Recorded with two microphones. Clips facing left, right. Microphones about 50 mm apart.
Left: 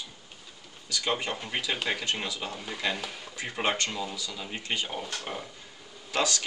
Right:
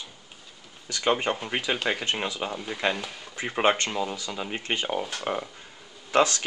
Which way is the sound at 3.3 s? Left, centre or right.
Right.